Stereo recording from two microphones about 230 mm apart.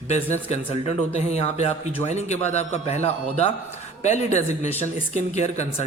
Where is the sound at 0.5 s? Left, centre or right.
Left.